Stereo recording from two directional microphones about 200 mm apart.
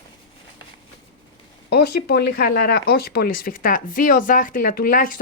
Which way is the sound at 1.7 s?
55° left (ahead or behind).